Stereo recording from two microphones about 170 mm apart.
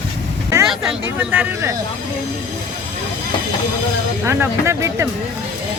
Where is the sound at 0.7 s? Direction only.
5° right (ahead or behind).